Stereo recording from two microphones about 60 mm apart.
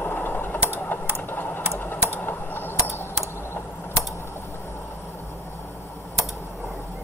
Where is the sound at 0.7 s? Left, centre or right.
Left.